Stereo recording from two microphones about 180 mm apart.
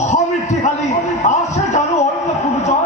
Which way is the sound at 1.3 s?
40° left (ahead or behind).